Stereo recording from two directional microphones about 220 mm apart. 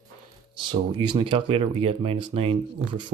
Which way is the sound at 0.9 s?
20° right (ahead or behind).